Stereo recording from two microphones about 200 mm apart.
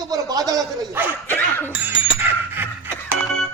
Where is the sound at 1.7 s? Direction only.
10° right (ahead or behind).